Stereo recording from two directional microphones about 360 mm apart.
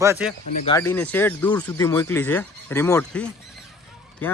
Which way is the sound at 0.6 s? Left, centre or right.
Centre.